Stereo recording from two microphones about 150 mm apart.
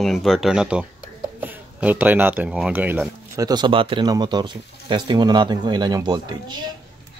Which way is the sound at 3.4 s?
30° right (ahead or behind).